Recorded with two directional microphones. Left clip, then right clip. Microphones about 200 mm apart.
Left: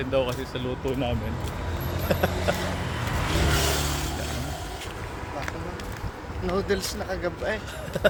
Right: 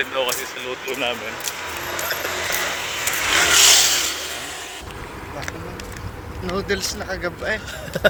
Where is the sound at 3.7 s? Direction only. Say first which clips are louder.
Right 12 dB; 55° left (ahead or behind).